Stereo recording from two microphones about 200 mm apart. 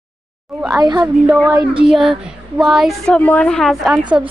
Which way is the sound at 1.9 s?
Centre (ahead or behind).